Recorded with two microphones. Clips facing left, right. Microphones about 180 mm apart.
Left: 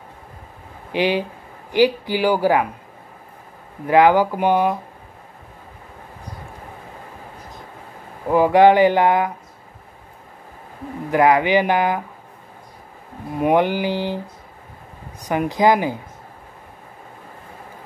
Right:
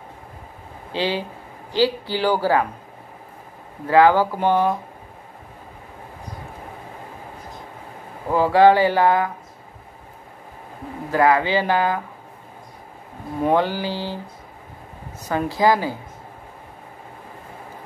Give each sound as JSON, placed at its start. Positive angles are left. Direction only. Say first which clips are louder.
{"t": 0.9, "sound": "speech", "louder": "left 4 dB", "side_deg": 15}
{"t": 3.8, "sound": "speech", "louder": "left 1 dB", "side_deg": 15}
{"t": 8.3, "sound": "speech", "louder": "left 2 dB", "side_deg": 15}
{"t": 11.1, "sound": "speech", "louder": "left 2 dB", "side_deg": 20}
{"t": 13.4, "sound": "speech", "louder": "left 2 dB", "side_deg": 15}